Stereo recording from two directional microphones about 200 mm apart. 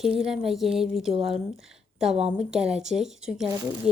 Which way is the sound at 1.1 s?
30° right (ahead or behind).